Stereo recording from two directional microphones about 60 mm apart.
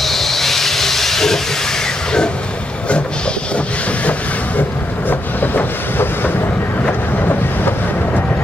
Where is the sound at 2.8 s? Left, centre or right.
Centre.